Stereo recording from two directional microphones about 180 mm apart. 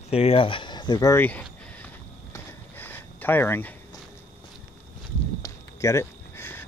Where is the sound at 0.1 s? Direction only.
35° left (ahead or behind).